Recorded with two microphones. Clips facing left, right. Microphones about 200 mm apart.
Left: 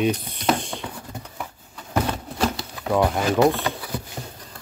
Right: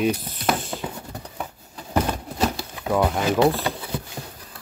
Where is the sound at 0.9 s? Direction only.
30° right (ahead or behind).